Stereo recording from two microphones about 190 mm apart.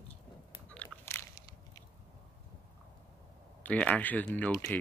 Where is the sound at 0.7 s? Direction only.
10° left (ahead or behind).